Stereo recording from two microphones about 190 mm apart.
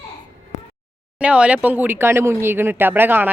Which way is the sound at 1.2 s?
5° right (ahead or behind).